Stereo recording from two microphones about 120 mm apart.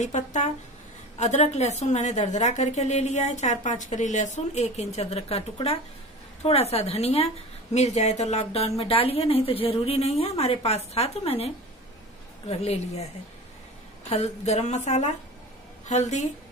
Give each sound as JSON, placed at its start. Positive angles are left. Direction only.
{"t": 0.0, "sound": "speech", "side_deg": 90}
{"t": 1.1, "sound": "a woman's voice", "side_deg": 75}